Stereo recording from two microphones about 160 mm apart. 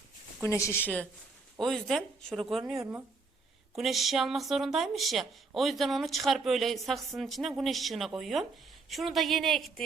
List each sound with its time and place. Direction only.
0.4 s a woman's voice: 15° left (ahead or behind)
1.5 s speech: centre (ahead or behind)
2.7 s speech: 15° right (ahead or behind)
3.8 s speech: centre (ahead or behind)